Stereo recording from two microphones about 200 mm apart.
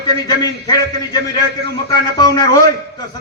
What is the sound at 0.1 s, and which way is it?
A man's voice, 20° left (ahead or behind).